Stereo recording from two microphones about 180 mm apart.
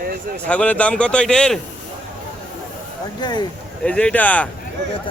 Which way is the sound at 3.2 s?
25° left (ahead or behind).